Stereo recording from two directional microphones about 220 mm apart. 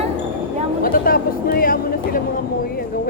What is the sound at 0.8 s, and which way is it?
Speech, 40° left (ahead or behind).